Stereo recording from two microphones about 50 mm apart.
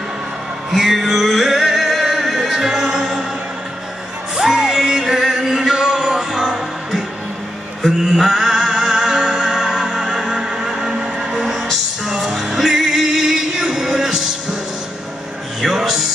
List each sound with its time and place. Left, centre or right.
0.7 s music: centre
4.4 s music: centre
15.6 s music: centre